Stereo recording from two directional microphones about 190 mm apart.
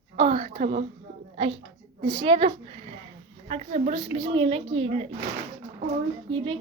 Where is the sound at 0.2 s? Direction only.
30° right (ahead or behind).